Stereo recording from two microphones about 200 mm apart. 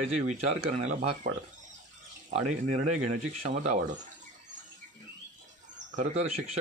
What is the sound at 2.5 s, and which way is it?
A man's voice, 35° right (ahead or behind).